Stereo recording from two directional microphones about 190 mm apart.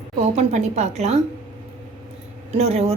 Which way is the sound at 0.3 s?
35° right (ahead or behind).